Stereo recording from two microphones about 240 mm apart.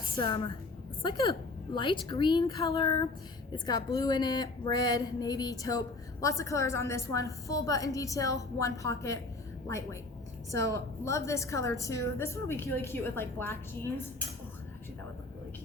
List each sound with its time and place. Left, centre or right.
1.0 s speech: centre